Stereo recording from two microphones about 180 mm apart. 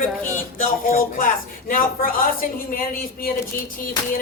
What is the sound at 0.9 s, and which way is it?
A woman's voice, 50° left (ahead or behind).